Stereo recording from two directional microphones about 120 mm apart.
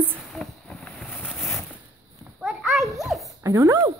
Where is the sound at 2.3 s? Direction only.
Centre (ahead or behind).